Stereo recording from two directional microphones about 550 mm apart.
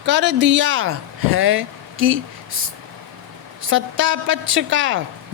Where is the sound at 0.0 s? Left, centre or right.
Centre.